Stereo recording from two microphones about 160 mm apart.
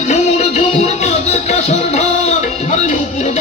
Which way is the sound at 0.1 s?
45° left (ahead or behind).